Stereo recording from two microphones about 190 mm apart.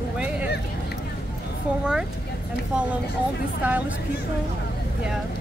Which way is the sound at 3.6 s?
5° right (ahead or behind).